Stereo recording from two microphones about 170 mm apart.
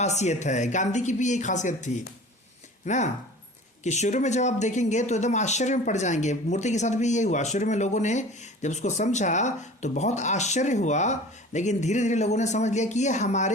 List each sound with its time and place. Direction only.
0.0 s speech: 40° left (ahead or behind)